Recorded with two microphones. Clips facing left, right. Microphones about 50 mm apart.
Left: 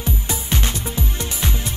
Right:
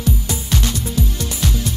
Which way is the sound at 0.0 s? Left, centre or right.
Left.